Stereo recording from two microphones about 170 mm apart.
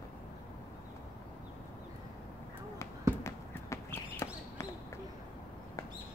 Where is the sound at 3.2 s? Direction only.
15° left (ahead or behind).